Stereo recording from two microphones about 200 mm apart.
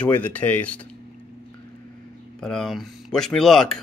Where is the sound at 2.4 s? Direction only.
5° left (ahead or behind).